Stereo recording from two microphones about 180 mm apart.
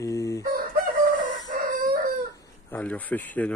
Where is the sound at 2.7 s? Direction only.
10° left (ahead or behind).